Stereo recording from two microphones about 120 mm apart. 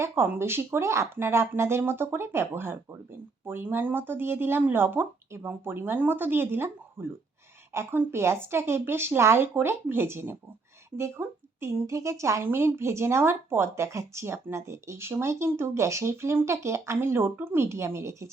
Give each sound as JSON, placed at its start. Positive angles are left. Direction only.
{"t": 0.0, "sound": "speech", "side_deg": -20}